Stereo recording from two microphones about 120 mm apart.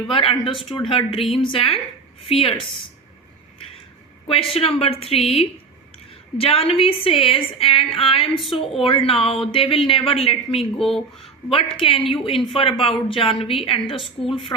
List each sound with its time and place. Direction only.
0.1 s speech: 50° left (ahead or behind)
4.5 s a woman's voice: 55° left (ahead or behind)